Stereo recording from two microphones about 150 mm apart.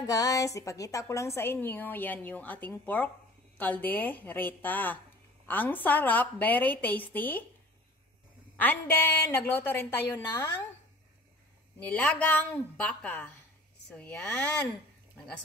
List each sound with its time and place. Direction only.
0.0 s a woman's voice: 20° left (ahead or behind)
8.5 s a woman's voice: 10° left (ahead or behind)
11.8 s a woman's voice: 10° left (ahead or behind)